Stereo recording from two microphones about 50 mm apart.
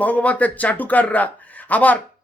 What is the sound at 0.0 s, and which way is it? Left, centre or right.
A man's voice, left.